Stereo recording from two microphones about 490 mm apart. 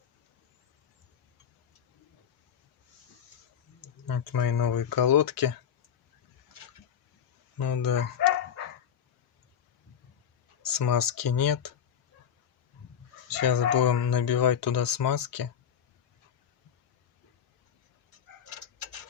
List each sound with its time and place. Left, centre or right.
4.0 s speech: left
7.6 s speech: left
10.6 s speech: left
13.3 s speech: left